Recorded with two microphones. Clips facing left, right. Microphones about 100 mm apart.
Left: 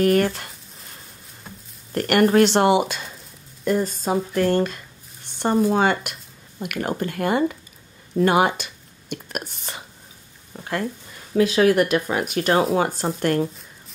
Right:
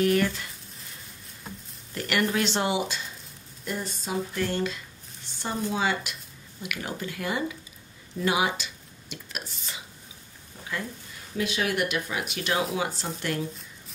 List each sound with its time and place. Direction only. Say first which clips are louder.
0.0 s speech: left 5 dB; 50° left (ahead or behind)
1.9 s speech: left 9 dB; 50° left (ahead or behind)
3.6 s speech: left 11 dB; 45° left (ahead or behind)
11.4 s speech: left 10 dB; 40° left (ahead or behind)